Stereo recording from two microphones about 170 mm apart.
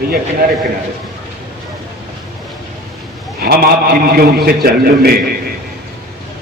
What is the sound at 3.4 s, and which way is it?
A man's voice, 60° right (ahead or behind).